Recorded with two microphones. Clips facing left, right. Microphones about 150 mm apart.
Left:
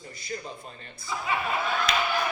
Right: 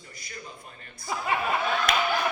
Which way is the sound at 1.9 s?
50° right (ahead or behind).